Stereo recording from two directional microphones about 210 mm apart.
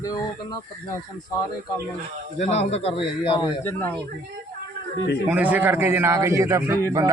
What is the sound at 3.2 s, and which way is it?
Speech, 15° left (ahead or behind).